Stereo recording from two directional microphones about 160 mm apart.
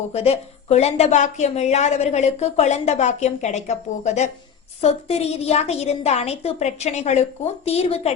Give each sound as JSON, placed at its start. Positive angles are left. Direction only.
{"t": 0.1, "sound": "a woman's voice", "side_deg": 40}